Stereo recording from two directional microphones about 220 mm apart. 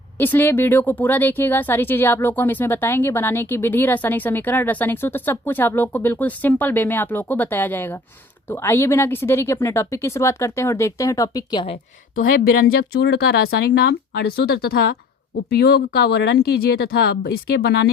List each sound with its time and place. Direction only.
0.2 s speech: 10° left (ahead or behind)
12.1 s speech: 40° left (ahead or behind)